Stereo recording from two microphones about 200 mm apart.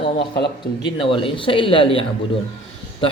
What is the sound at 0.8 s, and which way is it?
Speech, 25° left (ahead or behind).